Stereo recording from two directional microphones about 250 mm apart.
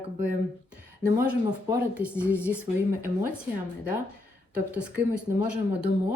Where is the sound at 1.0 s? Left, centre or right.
Centre.